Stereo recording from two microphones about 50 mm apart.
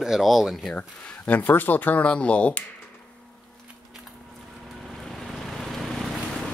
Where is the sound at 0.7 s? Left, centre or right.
Left.